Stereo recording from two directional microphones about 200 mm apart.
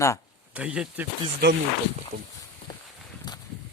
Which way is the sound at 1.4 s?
55° right (ahead or behind).